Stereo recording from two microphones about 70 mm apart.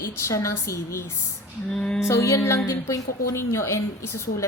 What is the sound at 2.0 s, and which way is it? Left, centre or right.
Music, left.